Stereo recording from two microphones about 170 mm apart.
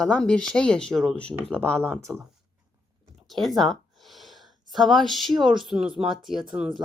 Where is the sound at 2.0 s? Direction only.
15° right (ahead or behind).